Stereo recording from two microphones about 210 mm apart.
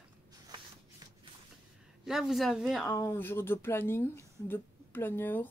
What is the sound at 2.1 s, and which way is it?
Speech, centre (ahead or behind).